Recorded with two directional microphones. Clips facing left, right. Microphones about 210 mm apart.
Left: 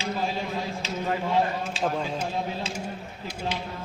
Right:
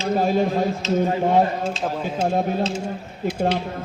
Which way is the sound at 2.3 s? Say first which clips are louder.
Right 9 dB; 50° right (ahead or behind).